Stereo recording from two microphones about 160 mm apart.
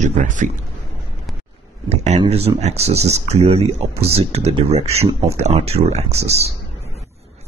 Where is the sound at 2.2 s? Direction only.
40° right (ahead or behind).